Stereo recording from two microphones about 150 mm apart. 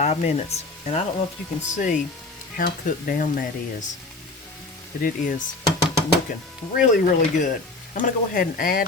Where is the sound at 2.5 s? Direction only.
75° left (ahead or behind).